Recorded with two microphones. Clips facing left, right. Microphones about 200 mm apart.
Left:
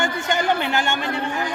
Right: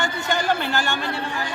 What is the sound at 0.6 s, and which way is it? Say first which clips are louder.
Speech: left 2 dB; 20° left (ahead or behind).